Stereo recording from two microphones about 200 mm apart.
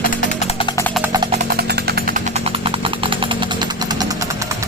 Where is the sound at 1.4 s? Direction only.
55° right (ahead or behind).